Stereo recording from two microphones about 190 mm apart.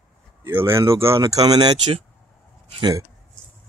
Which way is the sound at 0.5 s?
15° right (ahead or behind).